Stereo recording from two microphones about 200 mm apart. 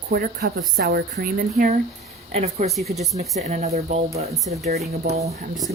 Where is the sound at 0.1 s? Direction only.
55° right (ahead or behind).